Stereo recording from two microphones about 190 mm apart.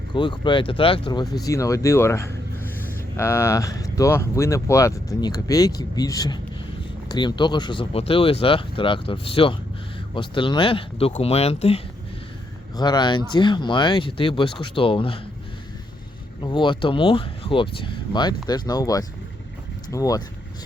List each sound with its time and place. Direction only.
0.1 s speech: 25° left (ahead or behind)
12.7 s speech: 20° left (ahead or behind)
16.4 s speech: 25° left (ahead or behind)